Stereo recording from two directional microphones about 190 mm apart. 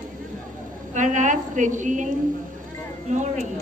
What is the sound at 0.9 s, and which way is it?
A woman's voice, 40° right (ahead or behind).